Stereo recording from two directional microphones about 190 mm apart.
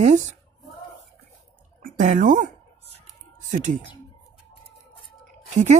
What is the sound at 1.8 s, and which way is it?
Speech, 45° right (ahead or behind).